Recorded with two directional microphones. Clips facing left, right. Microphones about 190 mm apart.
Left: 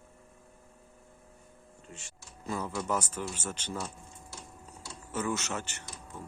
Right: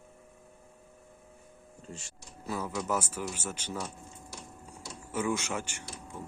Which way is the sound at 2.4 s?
5° right (ahead or behind).